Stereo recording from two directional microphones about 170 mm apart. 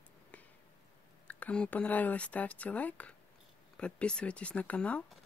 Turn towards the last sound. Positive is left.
turn(degrees=5)  # may be behind; listen again after turning